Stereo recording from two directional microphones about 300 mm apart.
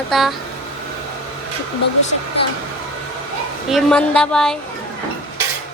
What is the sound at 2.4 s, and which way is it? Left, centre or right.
Speech, centre.